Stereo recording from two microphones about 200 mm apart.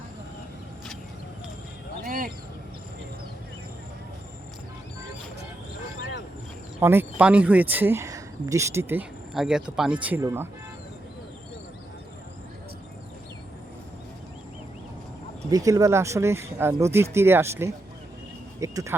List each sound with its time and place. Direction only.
2.0 s a sound: 45° right (ahead or behind)
6.7 s speech: 10° right (ahead or behind)
15.4 s speech: 20° right (ahead or behind)